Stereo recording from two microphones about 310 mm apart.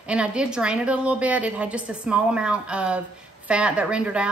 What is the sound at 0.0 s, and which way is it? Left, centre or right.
A woman's voice, centre.